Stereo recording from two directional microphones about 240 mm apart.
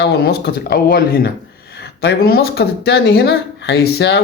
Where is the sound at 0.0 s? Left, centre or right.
Left.